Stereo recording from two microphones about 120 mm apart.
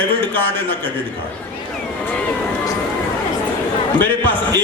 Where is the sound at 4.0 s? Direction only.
15° left (ahead or behind).